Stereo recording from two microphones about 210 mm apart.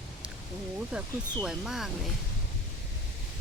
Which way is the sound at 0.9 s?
5° right (ahead or behind).